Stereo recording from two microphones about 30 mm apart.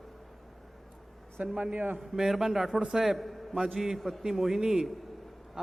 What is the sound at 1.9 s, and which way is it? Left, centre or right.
A man's voice, centre.